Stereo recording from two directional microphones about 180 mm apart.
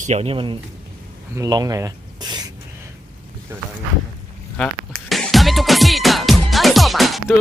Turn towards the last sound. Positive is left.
turn(degrees=0)  # may be behind; listen again after turning